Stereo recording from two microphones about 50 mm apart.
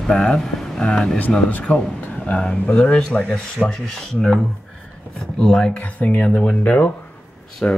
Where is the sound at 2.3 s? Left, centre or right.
Left.